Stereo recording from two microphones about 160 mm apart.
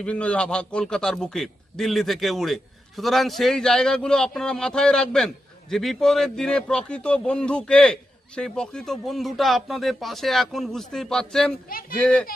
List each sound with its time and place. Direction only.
0.0 s a man's voice: 5° left (ahead or behind)